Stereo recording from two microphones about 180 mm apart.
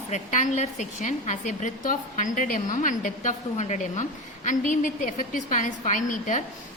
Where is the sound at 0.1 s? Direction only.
40° left (ahead or behind).